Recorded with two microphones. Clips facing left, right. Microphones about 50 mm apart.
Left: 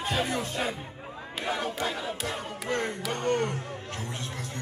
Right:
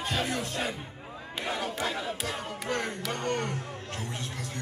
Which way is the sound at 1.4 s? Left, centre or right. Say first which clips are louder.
Left 2 dB; centre.